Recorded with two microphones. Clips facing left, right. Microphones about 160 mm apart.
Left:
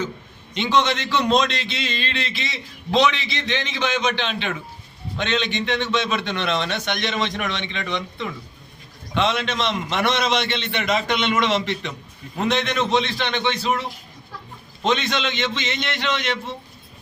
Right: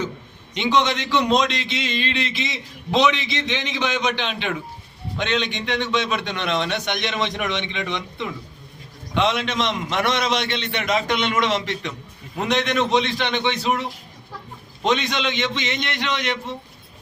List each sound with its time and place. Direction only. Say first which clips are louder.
0.5 s a man's voice: even; 15° right (ahead or behind)